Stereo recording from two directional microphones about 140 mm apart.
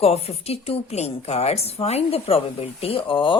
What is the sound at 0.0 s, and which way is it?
A woman's voice, 45° left (ahead or behind).